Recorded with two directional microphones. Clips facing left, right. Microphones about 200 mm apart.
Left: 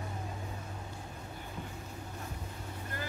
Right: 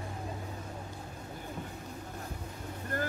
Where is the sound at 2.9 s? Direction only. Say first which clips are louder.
Right 8 dB; 50° right (ahead or behind).